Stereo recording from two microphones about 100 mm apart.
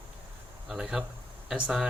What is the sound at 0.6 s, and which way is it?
Speech, 5° right (ahead or behind).